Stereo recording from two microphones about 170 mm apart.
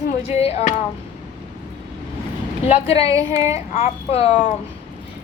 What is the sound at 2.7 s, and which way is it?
A woman's voice, 35° left (ahead or behind).